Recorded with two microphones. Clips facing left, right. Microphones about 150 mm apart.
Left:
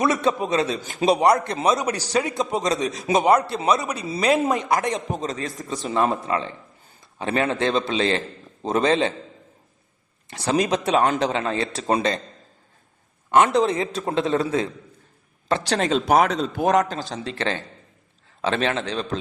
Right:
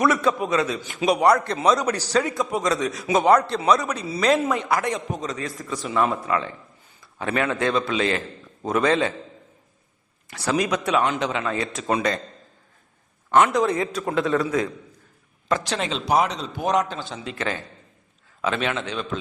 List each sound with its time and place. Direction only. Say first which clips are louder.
0.0 s a man's voice: even; 25° left (ahead or behind)
1.2 s a man's voice: even; 20° left (ahead or behind)
10.2 s a man's voice: left 2 dB; 25° left (ahead or behind)
11.0 s a man's voice: left 3 dB; 40° left (ahead or behind)
13.3 s a man's voice: left 1 dB; 25° left (ahead or behind)